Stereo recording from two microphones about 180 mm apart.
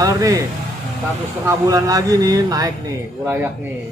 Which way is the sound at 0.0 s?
20° right (ahead or behind).